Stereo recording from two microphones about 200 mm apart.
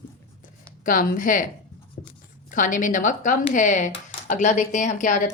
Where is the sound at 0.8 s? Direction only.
45° left (ahead or behind).